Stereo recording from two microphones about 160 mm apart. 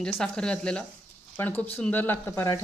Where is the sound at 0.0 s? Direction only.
5° left (ahead or behind).